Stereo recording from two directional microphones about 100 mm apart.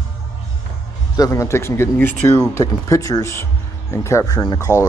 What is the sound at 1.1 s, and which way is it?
Speech, 35° left (ahead or behind).